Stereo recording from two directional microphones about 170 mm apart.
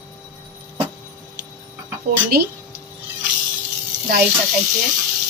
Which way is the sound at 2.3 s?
65° right (ahead or behind).